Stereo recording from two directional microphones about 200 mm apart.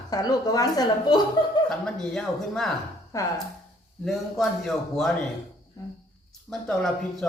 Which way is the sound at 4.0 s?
Centre (ahead or behind).